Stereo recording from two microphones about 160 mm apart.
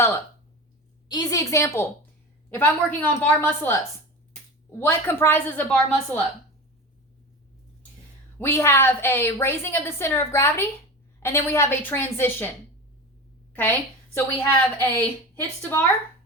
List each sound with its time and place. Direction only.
1.0 s a woman's voice: 25° left (ahead or behind)
4.8 s a woman's voice: 15° left (ahead or behind)
8.4 s a woman's voice: 15° left (ahead or behind)
13.5 s a woman's voice: 10° left (ahead or behind)